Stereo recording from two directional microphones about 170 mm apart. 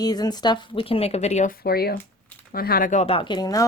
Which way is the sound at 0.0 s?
25° left (ahead or behind).